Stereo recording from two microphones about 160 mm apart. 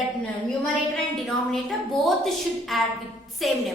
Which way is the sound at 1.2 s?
Centre (ahead or behind).